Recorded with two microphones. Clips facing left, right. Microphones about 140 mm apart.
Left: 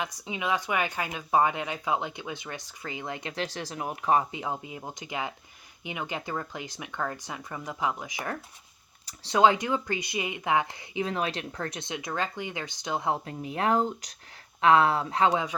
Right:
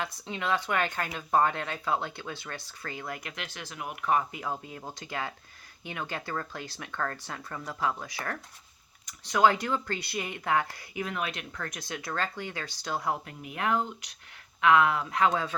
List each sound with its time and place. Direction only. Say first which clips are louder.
0.0 s speech: left 1 dB; 15° left (ahead or behind)
9.0 s speech: left 2 dB; 30° left (ahead or behind)
15.3 s speech: left 2 dB; 15° left (ahead or behind)